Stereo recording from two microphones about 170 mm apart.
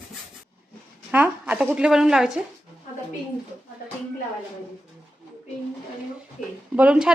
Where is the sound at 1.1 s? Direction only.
10° right (ahead or behind).